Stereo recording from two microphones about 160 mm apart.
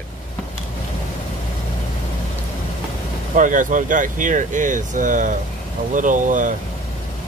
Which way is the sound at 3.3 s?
55° right (ahead or behind).